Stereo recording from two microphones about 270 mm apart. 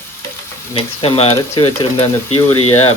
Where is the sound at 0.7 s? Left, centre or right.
Centre.